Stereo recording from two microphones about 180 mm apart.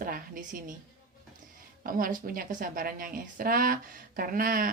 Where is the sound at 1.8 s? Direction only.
50° right (ahead or behind).